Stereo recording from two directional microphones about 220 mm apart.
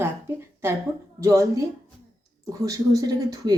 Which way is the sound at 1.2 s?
15° right (ahead or behind).